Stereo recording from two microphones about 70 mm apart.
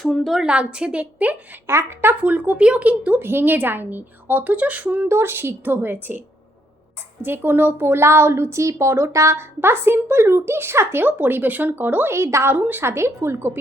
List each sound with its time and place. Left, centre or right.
0.0 s a woman's voice: centre
0.4 s a woman's voice: centre
1.6 s a woman's voice: right
2.2 s a woman's voice: right
5.0 s a woman's voice: right
12.1 s a woman's voice: right
12.5 s a woman's voice: right
12.8 s a woman's voice: right